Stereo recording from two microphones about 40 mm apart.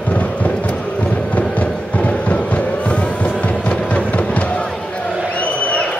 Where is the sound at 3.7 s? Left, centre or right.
Left.